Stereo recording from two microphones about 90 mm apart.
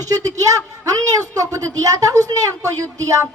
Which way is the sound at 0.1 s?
40° right (ahead or behind).